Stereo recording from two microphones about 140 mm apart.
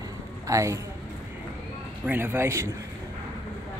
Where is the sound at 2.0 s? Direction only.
15° right (ahead or behind).